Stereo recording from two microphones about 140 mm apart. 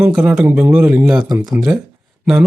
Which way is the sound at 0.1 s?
5° right (ahead or behind).